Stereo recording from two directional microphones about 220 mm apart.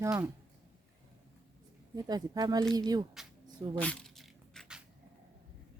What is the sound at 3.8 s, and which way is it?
Dog, 5° left (ahead or behind).